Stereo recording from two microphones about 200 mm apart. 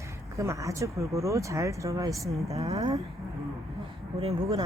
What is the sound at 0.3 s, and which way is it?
Speech, 15° right (ahead or behind).